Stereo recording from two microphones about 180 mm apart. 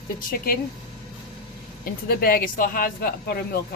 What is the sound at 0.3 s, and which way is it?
Speech, 55° left (ahead or behind).